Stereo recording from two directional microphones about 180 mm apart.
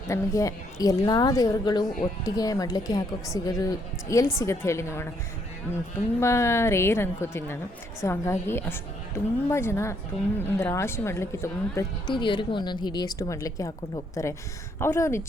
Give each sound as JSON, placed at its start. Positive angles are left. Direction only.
{"t": 0.1, "sound": "a woman's voice", "side_deg": 20}
{"t": 6.1, "sound": "a woman's voice", "side_deg": 15}